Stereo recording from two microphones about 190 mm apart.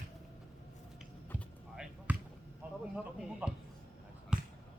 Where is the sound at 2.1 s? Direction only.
10° right (ahead or behind).